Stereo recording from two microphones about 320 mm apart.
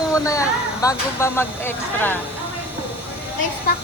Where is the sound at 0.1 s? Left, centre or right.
Centre.